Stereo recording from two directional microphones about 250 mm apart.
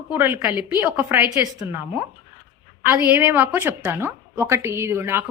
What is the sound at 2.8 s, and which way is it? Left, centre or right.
A woman's voice, centre.